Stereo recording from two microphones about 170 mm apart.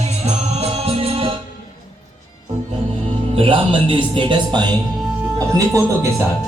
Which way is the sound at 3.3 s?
30° right (ahead or behind).